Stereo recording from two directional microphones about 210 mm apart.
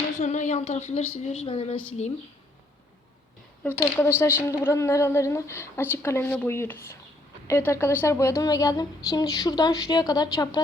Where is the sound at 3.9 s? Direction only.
10° left (ahead or behind).